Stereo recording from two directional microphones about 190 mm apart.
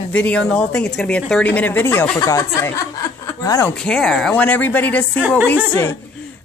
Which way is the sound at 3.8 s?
5° left (ahead or behind).